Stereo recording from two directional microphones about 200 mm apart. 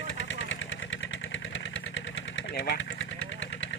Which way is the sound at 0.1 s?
70° left (ahead or behind).